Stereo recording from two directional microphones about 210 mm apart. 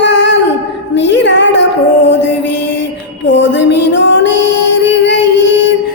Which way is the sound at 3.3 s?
60° left (ahead or behind).